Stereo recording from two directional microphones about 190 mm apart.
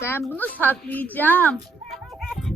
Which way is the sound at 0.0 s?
15° left (ahead or behind).